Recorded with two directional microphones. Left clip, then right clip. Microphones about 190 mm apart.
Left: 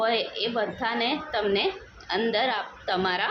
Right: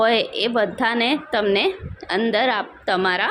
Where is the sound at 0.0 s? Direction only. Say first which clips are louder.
Right 7 dB; 40° right (ahead or behind).